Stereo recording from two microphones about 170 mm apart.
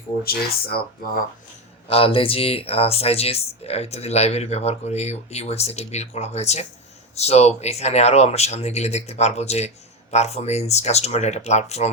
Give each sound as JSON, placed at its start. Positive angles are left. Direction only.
{"t": 0.3, "sound": "speech", "side_deg": 65}
{"t": 1.9, "sound": "speech", "side_deg": 35}